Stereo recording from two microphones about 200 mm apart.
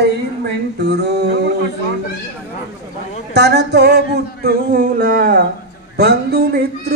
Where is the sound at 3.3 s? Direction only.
55° right (ahead or behind).